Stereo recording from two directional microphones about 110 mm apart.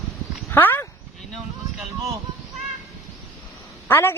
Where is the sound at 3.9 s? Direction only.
20° left (ahead or behind).